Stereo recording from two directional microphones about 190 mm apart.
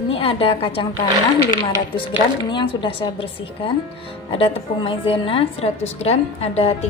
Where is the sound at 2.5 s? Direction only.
25° left (ahead or behind).